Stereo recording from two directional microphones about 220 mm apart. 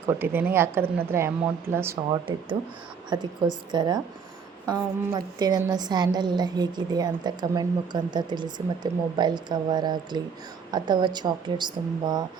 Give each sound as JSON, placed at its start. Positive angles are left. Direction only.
{"t": 0.0, "sound": "a woman's voice", "side_deg": -10}